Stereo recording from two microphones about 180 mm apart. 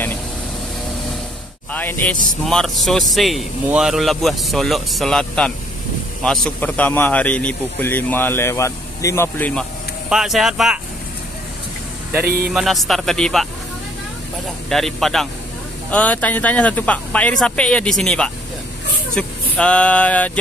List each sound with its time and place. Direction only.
1.7 s speech: 10° left (ahead or behind)
10.0 s speech: centre (ahead or behind)
12.3 s a man's voice: 55° right (ahead or behind)
12.5 s speech: centre (ahead or behind)
14.7 s speech: centre (ahead or behind)